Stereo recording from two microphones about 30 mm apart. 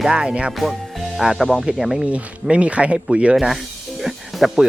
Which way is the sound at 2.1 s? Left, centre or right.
Right.